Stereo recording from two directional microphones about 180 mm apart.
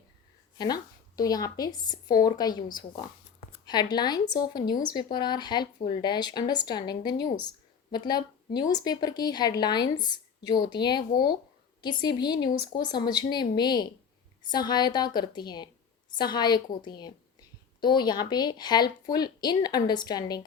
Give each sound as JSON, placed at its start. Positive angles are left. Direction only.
{"t": 0.6, "sound": "speech", "side_deg": 20}